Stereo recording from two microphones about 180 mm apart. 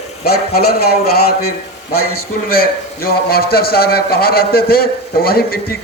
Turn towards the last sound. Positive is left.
turn(degrees=55)  # may be behind; listen again after turning